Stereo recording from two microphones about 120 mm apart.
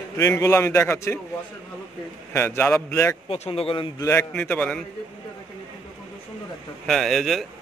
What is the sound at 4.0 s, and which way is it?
Speech, 25° left (ahead or behind).